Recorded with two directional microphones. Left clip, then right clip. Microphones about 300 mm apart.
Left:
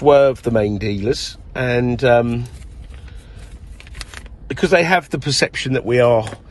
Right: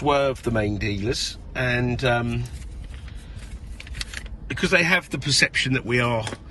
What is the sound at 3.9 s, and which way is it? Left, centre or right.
Vehicle, left.